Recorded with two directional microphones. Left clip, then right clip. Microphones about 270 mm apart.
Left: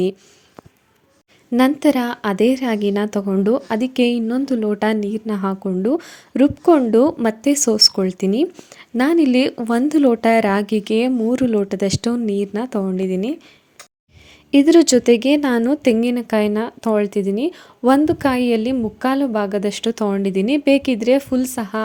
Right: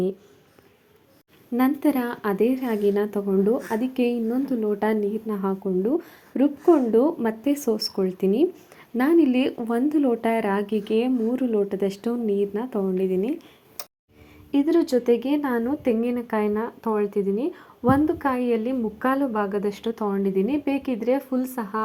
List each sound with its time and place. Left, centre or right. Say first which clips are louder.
1.5 s a woman's voice: left 7 dB; left
14.6 s a woman's voice: left 8 dB; left